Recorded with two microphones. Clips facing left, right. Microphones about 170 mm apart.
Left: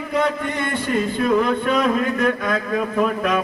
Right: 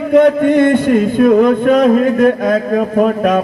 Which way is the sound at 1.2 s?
45° right (ahead or behind).